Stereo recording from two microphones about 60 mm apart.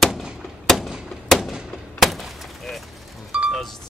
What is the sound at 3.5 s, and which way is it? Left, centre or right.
Music, centre.